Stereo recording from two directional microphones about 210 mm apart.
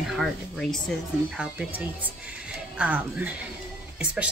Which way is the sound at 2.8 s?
5° right (ahead or behind).